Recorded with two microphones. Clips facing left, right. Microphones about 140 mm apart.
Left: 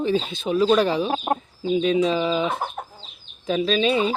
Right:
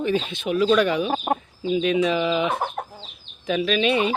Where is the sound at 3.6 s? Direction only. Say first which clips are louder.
Left 1 dB; 35° left (ahead or behind).